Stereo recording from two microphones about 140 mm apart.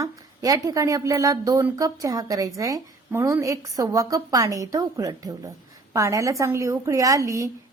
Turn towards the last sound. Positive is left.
turn(degrees=-20)  # may be behind; listen again after turning